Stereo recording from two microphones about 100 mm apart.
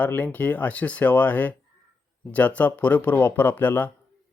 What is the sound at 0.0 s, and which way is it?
A man's voice, 15° left (ahead or behind).